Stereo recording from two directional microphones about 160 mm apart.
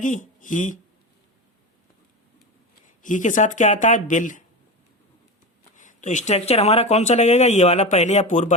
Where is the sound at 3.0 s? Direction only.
50° left (ahead or behind).